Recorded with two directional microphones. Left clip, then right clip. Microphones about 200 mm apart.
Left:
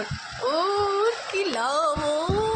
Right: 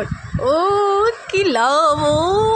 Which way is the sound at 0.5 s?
40° right (ahead or behind).